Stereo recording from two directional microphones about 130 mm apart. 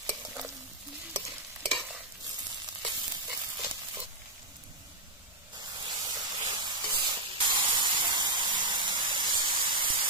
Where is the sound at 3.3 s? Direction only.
20° right (ahead or behind).